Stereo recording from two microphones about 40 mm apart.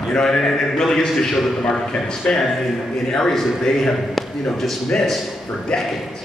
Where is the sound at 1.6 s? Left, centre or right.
Left.